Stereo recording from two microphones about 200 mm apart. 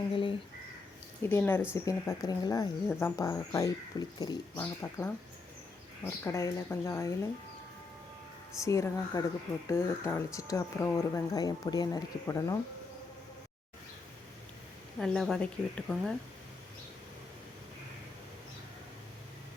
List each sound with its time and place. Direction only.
0.1 s a sound: 25° left (ahead or behind)
1.3 s speech: 10° left (ahead or behind)
6.2 s speech: 15° left (ahead or behind)
8.6 s speech: 15° left (ahead or behind)
14.9 s a woman's voice: centre (ahead or behind)